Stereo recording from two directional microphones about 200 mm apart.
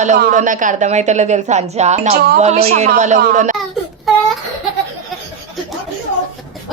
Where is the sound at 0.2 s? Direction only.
40° right (ahead or behind).